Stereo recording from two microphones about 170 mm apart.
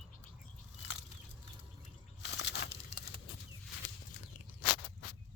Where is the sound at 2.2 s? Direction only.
90° left.